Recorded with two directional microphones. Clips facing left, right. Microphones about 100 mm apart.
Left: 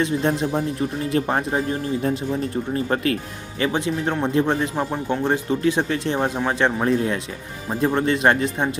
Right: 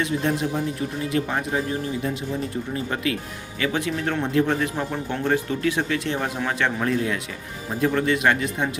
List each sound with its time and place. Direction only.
0.0 s speech: 30° left (ahead or behind)
2.7 s speech: 40° left (ahead or behind)
3.6 s speech: 25° left (ahead or behind)